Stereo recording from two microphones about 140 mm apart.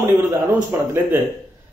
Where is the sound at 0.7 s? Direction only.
15° right (ahead or behind).